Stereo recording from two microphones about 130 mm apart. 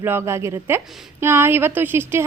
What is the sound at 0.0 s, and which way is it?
A woman's voice, 15° right (ahead or behind).